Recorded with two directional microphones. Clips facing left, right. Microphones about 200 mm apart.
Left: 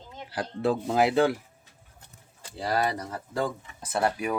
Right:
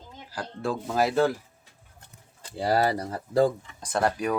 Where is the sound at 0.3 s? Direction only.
20° left (ahead or behind).